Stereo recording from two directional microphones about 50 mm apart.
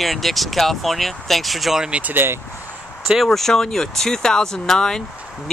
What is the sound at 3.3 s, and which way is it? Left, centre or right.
Speech, centre.